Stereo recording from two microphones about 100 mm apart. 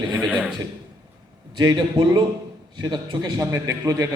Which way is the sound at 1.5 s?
45° right (ahead or behind).